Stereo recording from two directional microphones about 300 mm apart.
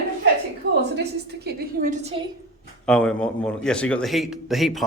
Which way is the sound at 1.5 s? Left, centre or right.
Right.